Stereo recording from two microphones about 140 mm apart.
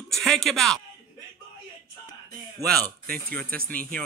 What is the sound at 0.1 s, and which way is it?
Speech, centre (ahead or behind).